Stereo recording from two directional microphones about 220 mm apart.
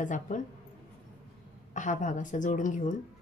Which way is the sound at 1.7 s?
35° left (ahead or behind).